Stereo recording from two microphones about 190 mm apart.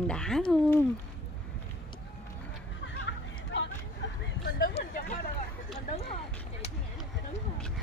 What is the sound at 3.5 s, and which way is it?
Vehicle, 65° left (ahead or behind).